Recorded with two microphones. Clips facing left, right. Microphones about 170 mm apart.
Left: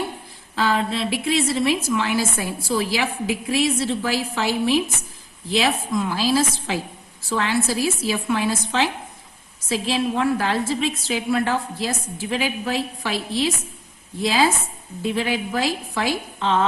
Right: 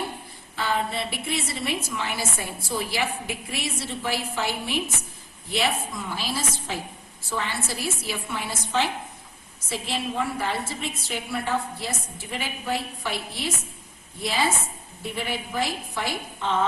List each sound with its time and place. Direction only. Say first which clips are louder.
0.5 s a woman's voice: left 5 dB; 90° left